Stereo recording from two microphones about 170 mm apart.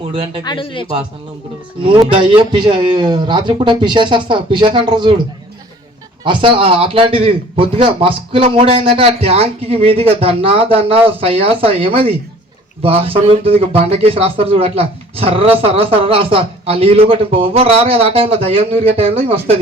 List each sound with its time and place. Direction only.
0.1 s speech: 30° right (ahead or behind)
0.4 s speech: 30° left (ahead or behind)
1.8 s a man's voice: 30° right (ahead or behind)
6.2 s speech: 30° right (ahead or behind)